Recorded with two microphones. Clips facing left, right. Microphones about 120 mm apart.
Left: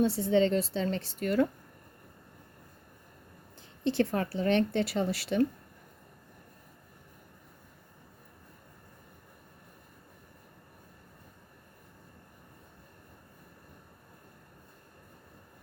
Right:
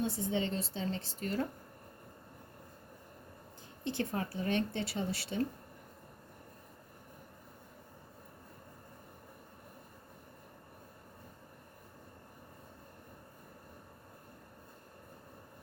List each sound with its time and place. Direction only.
0.0 s a woman's voice: 75° left (ahead or behind)
3.8 s a woman's voice: 85° left